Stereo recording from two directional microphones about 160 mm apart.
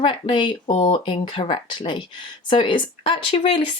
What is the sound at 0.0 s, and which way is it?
Speech, 30° left (ahead or behind).